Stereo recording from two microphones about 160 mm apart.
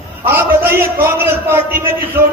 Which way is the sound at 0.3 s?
15° right (ahead or behind).